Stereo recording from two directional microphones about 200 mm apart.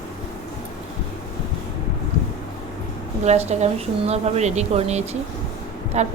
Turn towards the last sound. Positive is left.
turn(degrees=-35)  # may be behind; listen again after turning